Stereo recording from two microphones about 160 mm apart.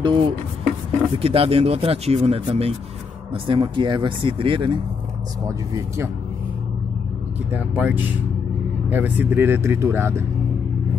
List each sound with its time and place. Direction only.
0.0 s speech: 30° right (ahead or behind)
7.5 s speech: 10° right (ahead or behind)